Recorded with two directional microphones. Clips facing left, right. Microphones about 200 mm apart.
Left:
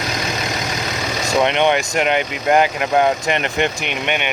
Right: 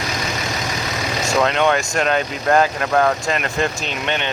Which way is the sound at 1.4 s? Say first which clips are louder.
Left 1 dB; 25° left (ahead or behind).